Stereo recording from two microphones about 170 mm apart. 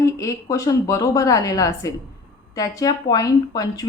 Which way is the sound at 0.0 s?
20° left (ahead or behind).